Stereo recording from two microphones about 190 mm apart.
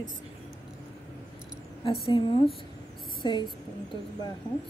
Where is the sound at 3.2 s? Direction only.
25° left (ahead or behind).